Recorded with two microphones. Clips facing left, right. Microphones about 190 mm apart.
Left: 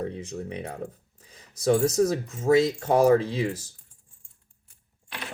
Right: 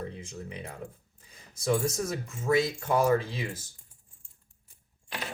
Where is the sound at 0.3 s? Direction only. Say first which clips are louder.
Left 7 dB; 70° left (ahead or behind).